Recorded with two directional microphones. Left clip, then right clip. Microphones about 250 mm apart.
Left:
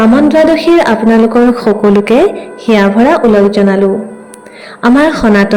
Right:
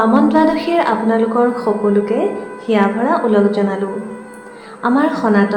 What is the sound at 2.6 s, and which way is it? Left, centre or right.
A woman's voice, left.